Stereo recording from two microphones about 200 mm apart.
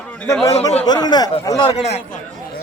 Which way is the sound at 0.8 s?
20° left (ahead or behind).